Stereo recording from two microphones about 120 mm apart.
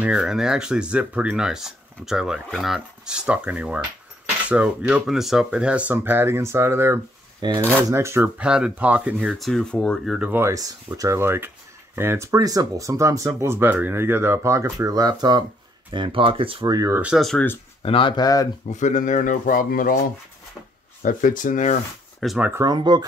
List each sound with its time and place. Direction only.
0.0 s speech: 5° right (ahead or behind)
7.4 s speech: 35° right (ahead or behind)
7.9 s speech: 25° right (ahead or behind)
8.2 s speech: 5° right (ahead or behind)
10.3 s speech: 25° right (ahead or behind); by 16.6 s 50° right (ahead or behind)
16.6 s speech: 35° right (ahead or behind)
16.9 s speech: 10° right (ahead or behind)
17.2 s speech: 5° left (ahead or behind)
17.8 s speech: 45° left (ahead or behind)
18.7 s speech: 90° left
21.0 s speech: 90° left
22.2 s speech: 5° left (ahead or behind)
22.6 s speech: 35° right (ahead or behind)